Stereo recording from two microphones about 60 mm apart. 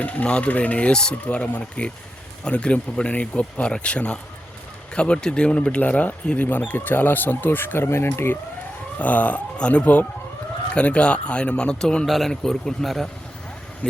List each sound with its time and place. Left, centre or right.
0.0 s speech: left
9.0 s a man's voice: left
12.0 s a man's voice: centre